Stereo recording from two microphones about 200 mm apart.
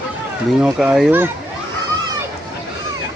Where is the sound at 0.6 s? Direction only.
5° right (ahead or behind).